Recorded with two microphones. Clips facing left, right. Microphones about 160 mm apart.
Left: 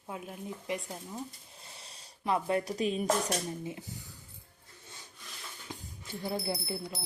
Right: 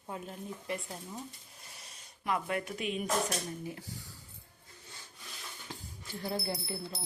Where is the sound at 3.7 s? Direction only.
20° left (ahead or behind).